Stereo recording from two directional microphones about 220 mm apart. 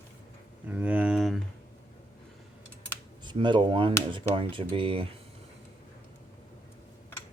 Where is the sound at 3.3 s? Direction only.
20° right (ahead or behind).